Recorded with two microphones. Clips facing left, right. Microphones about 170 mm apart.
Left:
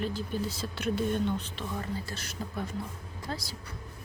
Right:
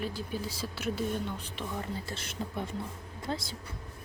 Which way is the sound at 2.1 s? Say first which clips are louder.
Right 1 dB; 25° right (ahead or behind).